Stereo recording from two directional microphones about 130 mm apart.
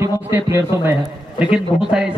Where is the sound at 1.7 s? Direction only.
5° right (ahead or behind).